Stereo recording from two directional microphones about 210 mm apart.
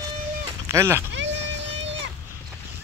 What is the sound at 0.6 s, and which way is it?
Speech, 10° right (ahead or behind).